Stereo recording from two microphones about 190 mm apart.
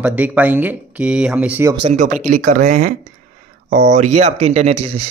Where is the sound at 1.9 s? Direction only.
40° right (ahead or behind).